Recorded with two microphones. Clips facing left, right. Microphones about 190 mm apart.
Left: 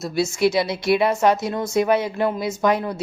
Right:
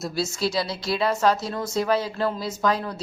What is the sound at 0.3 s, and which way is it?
Speech, 20° left (ahead or behind).